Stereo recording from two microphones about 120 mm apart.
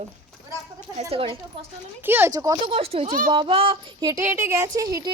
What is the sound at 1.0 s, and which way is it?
Speech, 55° right (ahead or behind).